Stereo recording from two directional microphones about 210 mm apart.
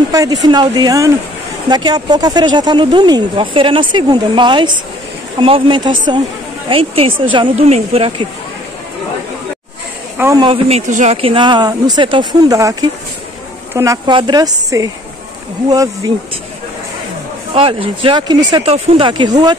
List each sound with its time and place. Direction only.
0.1 s speech: 15° right (ahead or behind)
10.1 s speech: 15° right (ahead or behind)
13.7 s speech: 20° right (ahead or behind)
17.6 s speech: 25° right (ahead or behind)